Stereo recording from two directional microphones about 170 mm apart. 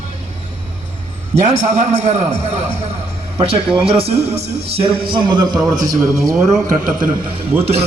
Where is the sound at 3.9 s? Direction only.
35° right (ahead or behind).